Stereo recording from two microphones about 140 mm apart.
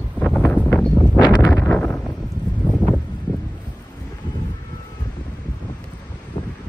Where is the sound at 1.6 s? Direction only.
10° left (ahead or behind).